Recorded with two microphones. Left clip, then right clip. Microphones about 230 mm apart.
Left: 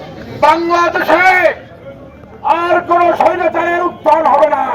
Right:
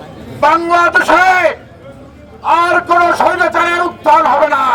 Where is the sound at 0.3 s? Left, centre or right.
Centre.